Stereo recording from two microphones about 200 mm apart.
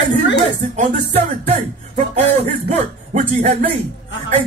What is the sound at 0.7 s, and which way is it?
Music, 35° right (ahead or behind).